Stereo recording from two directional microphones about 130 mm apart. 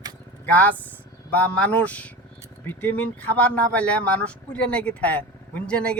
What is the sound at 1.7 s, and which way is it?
Speech, 10° left (ahead or behind).